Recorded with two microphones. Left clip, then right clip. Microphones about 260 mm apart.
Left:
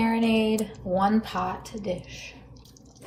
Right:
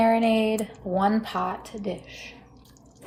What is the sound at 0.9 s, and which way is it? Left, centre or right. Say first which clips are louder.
Speech: even; right.